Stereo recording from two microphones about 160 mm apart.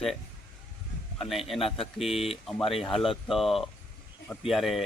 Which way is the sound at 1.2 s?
Centre (ahead or behind).